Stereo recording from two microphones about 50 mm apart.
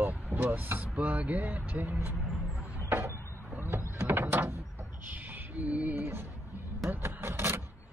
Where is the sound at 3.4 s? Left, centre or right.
Right.